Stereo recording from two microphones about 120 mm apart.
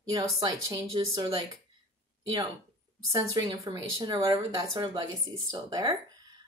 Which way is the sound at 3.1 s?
30° right (ahead or behind).